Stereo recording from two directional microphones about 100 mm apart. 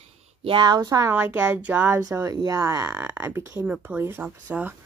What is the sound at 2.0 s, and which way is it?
Speech, 30° right (ahead or behind).